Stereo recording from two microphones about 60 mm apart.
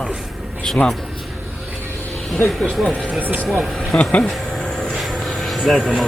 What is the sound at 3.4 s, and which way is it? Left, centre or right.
Speech, centre.